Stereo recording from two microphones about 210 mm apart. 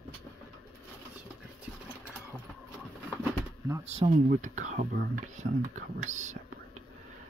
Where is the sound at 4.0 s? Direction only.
35° right (ahead or behind).